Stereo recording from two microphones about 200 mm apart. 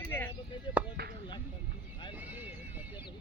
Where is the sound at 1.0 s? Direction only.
50° right (ahead or behind).